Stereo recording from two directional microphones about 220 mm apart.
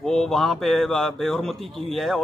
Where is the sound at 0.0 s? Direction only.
Centre (ahead or behind).